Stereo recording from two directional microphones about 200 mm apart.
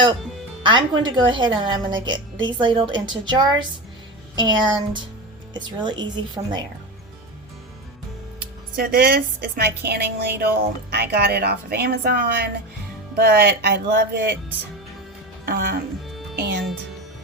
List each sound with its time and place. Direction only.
0.6 s a woman's voice: 25° right (ahead or behind)
8.7 s a woman's voice: 50° right (ahead or behind)
15.4 s speech: 45° right (ahead or behind)
16.3 s music: 55° right (ahead or behind)